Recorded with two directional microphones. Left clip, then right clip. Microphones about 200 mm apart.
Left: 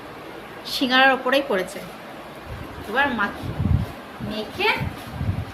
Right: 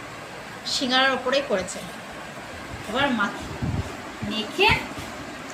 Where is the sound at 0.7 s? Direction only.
50° left (ahead or behind).